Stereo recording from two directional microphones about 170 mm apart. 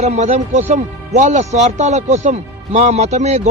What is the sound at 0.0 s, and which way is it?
A man's voice, 40° right (ahead or behind).